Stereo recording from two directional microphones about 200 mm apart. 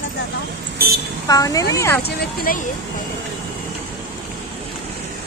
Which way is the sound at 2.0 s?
45° left (ahead or behind).